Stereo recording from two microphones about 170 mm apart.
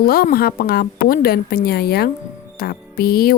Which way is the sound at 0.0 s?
60° left (ahead or behind).